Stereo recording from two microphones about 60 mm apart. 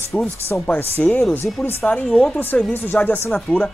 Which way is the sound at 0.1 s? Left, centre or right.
Centre.